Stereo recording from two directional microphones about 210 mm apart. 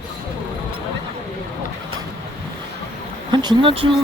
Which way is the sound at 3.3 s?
20° right (ahead or behind).